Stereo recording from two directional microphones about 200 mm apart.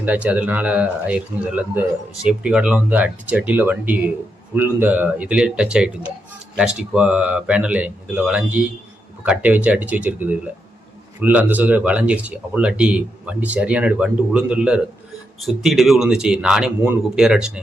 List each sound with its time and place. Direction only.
0.0 s a man's voice: 5° right (ahead or behind)